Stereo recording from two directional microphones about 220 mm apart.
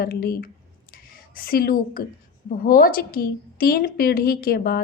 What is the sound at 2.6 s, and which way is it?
A woman's voice, 40° left (ahead or behind).